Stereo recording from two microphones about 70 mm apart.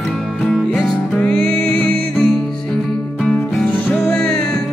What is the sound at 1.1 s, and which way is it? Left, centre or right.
Music, centre.